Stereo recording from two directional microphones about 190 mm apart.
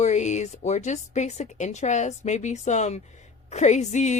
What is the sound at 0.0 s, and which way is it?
Speech, 40° left (ahead or behind).